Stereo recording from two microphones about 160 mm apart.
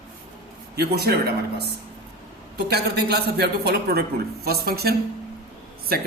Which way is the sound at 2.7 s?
85° right.